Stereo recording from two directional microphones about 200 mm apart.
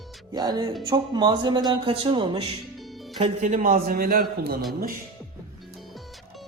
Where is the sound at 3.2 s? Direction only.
35° right (ahead or behind).